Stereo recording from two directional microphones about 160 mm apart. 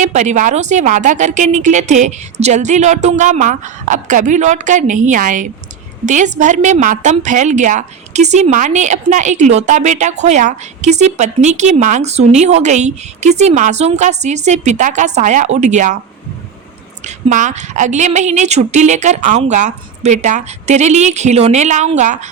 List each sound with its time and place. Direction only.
0.0 s a woman's voice: 50° right (ahead or behind)
17.1 s a woman's voice: 50° right (ahead or behind)